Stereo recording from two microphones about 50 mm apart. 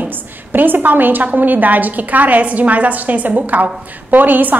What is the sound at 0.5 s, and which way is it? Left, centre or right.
A woman's voice, right.